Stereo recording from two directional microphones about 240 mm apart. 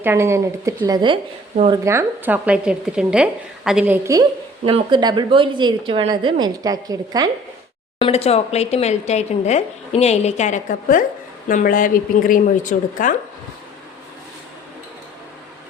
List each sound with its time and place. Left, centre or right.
0.0 s a woman's voice: centre
1.8 s a woman's voice: centre
7.9 s speech: left